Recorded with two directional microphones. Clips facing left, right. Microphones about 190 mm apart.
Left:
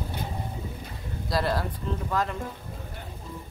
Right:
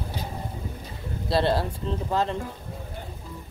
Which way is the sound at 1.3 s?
30° right (ahead or behind).